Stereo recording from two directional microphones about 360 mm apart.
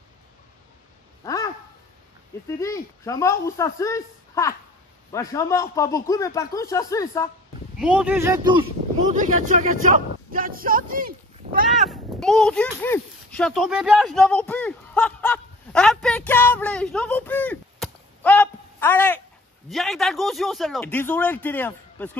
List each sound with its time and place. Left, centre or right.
1.2 s a sound: centre
2.4 s speech: centre
7.7 s speech: centre; by 11.6 s right
11.7 s speech: centre